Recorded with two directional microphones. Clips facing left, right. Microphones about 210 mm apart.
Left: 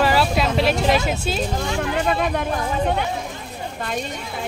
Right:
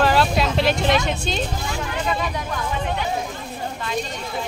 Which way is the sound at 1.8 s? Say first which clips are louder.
Left 4 dB; 60° left (ahead or behind).